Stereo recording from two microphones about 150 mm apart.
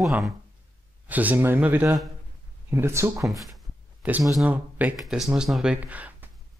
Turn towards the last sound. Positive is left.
turn(degrees=-10)  # may be behind; listen again after turning